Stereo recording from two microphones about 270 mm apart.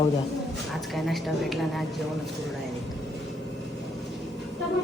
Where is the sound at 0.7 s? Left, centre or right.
Centre.